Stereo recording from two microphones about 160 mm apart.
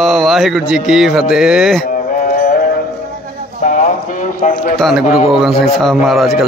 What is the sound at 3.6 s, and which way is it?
Clip-clop, 50° left (ahead or behind).